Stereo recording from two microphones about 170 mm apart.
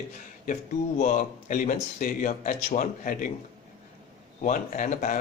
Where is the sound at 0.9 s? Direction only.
50° left (ahead or behind).